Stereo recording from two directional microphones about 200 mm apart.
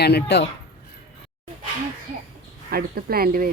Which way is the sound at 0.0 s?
55° left (ahead or behind).